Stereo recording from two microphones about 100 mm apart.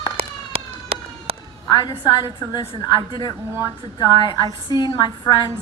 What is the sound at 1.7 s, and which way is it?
A woman's voice, 45° left (ahead or behind).